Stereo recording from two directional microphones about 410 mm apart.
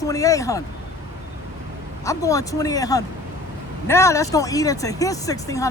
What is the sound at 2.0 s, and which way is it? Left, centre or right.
Speech, centre.